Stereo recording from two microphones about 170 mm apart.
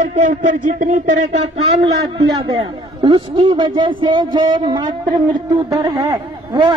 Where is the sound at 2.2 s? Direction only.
25° right (ahead or behind).